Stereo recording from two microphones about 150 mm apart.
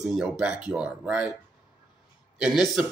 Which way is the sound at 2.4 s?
5° right (ahead or behind).